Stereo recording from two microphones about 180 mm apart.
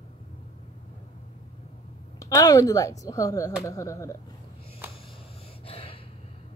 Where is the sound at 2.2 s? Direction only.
20° left (ahead or behind).